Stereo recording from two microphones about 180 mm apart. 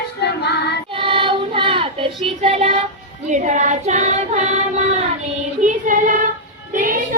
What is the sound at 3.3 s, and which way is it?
Female singing, 40° right (ahead or behind).